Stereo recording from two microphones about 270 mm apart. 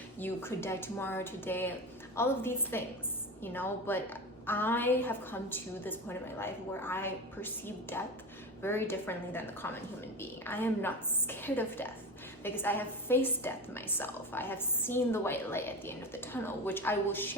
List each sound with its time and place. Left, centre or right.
0.2 s a woman's voice: centre